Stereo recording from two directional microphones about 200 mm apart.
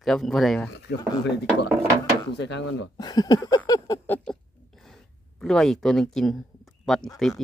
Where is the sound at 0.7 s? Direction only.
60° left (ahead or behind).